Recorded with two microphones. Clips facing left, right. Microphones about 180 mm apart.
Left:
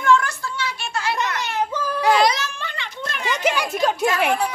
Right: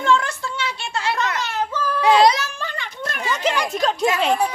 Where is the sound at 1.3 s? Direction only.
15° left (ahead or behind).